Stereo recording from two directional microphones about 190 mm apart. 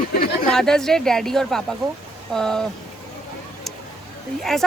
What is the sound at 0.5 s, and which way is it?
Speech, centre (ahead or behind).